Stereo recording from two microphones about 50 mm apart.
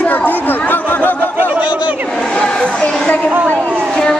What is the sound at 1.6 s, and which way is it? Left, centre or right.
Speech, right.